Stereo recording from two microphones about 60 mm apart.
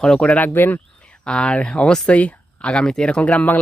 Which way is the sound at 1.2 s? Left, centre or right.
Centre.